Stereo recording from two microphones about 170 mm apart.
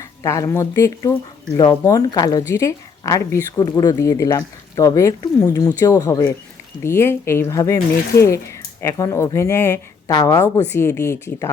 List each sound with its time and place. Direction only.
0.0 s a woman's voice: 20° left (ahead or behind)